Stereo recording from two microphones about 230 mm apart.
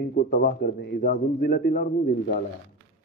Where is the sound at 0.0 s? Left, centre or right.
Left.